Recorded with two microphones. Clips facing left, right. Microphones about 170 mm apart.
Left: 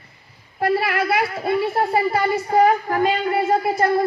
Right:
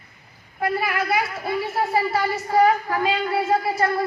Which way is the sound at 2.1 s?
50° left (ahead or behind).